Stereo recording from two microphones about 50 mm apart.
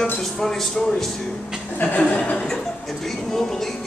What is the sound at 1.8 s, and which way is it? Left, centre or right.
Chuckle, left.